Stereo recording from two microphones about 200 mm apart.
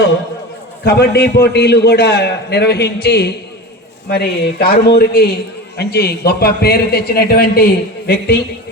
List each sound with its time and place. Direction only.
0.9 s a man's voice: 55° left (ahead or behind)